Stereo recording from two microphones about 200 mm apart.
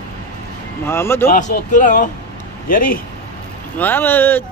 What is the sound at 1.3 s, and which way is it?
Speech, 40° left (ahead or behind).